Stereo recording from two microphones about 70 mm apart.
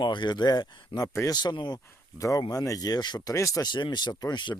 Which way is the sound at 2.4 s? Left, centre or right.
Left.